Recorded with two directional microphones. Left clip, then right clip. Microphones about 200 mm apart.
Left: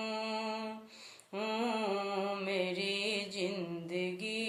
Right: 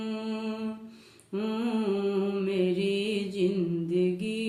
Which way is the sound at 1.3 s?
Centre (ahead or behind).